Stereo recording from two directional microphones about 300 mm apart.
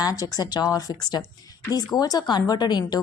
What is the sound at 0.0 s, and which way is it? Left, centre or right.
A woman's voice, centre.